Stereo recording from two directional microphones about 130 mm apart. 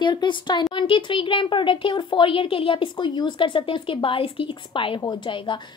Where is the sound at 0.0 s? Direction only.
35° left (ahead or behind).